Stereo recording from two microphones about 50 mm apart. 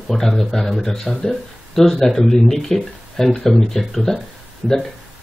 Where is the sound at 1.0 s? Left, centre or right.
Centre.